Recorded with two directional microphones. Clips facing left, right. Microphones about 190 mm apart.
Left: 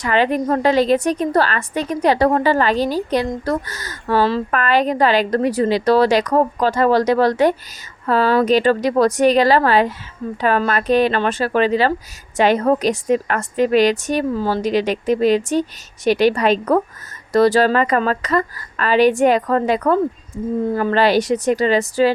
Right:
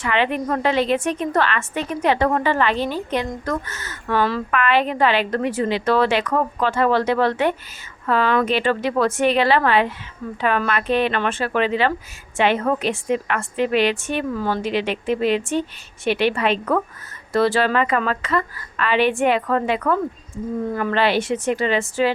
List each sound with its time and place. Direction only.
0.0 s a woman's voice: 40° left (ahead or behind)